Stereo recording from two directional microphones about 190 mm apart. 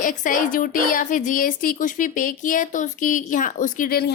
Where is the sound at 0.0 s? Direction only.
45° left (ahead or behind).